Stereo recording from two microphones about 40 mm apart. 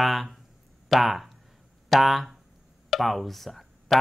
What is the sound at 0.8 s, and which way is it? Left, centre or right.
Speech, centre.